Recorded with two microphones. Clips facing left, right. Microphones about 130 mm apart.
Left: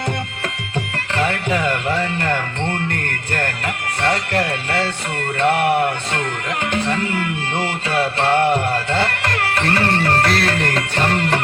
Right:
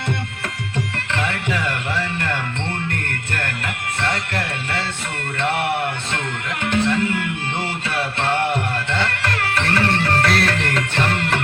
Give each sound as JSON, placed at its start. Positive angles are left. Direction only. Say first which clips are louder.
{"t": 1.1, "sound": "music", "louder": "left 4 dB", "side_deg": 40}
{"t": 1.9, "sound": "music", "louder": "left 4 dB", "side_deg": 30}
{"t": 8.7, "sound": "music", "louder": "left 3 dB", "side_deg": 35}